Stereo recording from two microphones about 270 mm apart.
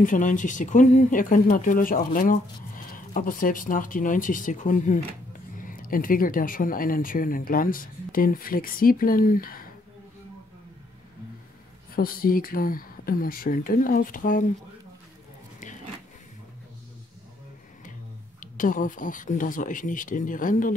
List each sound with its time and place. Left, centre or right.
0.0 s speech: left
11.9 s speech: left
18.4 s speech: left